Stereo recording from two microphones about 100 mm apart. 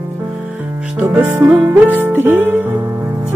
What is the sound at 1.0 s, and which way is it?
Music, 15° right (ahead or behind).